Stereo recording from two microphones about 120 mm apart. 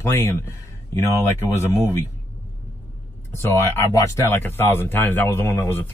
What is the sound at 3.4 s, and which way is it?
A man's voice, 20° left (ahead or behind).